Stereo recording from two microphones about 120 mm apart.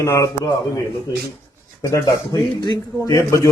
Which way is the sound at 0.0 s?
25° left (ahead or behind).